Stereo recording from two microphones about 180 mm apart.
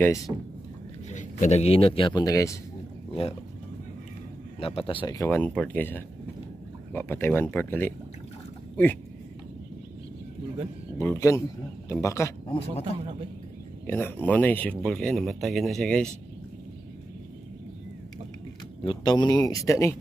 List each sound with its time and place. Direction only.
1.1 s speech: 40° left (ahead or behind); by 2.5 s 20° left (ahead or behind)
3.2 s speech: 35° left (ahead or behind)
4.6 s speech: 30° left (ahead or behind); by 7.9 s 10° left (ahead or behind)
11.0 s speech: 15° left (ahead or behind)
12.4 s speech: 30° left (ahead or behind)
13.8 s speech: 10° left (ahead or behind)
18.9 s speech: 25° left (ahead or behind)